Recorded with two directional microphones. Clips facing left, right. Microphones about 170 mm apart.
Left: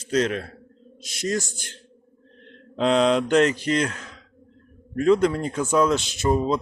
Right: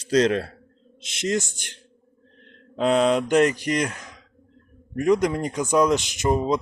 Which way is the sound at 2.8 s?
5° right (ahead or behind).